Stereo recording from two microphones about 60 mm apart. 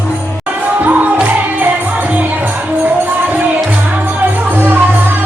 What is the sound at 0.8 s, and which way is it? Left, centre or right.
Music, right.